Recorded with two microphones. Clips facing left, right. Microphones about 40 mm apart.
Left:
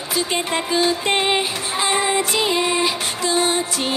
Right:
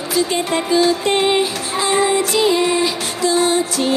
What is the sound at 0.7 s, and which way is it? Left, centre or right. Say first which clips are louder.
Music: right 4 dB; left.